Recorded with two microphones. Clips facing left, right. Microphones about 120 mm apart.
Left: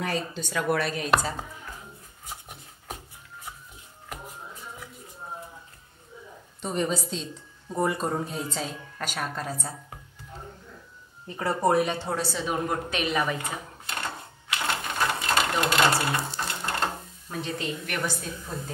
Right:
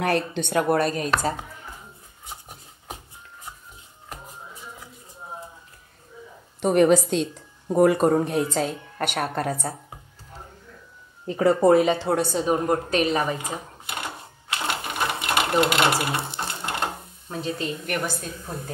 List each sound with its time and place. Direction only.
0.0 s speech: 65° right (ahead or behind)
0.7 s a woman's voice: 45° right (ahead or behind)
6.6 s a woman's voice: 75° right (ahead or behind); by 9.8 s 55° right (ahead or behind)
11.2 s speech: 90° right
12.2 s a woman's voice: 45° right (ahead or behind)
12.5 s a woman's voice: 35° right (ahead or behind)
13.4 s a sound: 15° right (ahead or behind)
14.5 s sewing machine: 20° right (ahead or behind)
17.6 s a woman's voice: 45° right (ahead or behind)